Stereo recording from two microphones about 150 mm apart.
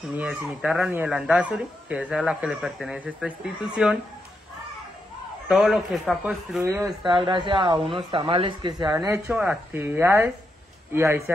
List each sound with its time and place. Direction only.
0.1 s speech: 10° right (ahead or behind)
5.5 s speech: centre (ahead or behind)
7.1 s speech: 35° right (ahead or behind); by 11.3 s 15° right (ahead or behind)